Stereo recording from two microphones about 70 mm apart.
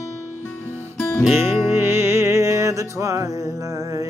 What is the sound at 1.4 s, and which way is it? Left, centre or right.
Music, right.